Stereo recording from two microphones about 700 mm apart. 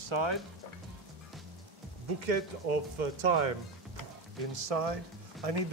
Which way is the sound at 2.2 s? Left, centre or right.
Right.